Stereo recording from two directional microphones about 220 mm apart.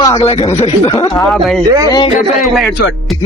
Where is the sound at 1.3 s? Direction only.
Centre (ahead or behind).